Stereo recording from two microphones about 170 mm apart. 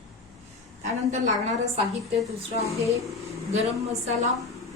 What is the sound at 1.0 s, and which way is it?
A woman's voice, 45° right (ahead or behind).